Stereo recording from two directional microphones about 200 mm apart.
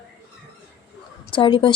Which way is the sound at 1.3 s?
25° left (ahead or behind).